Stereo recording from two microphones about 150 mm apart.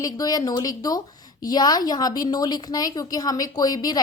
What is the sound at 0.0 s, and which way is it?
A woman's voice, 25° left (ahead or behind).